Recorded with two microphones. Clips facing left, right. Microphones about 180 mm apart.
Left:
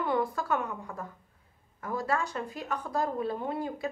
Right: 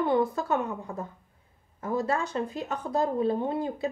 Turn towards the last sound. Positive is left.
turn(degrees=-25)  # may be behind; listen again after turning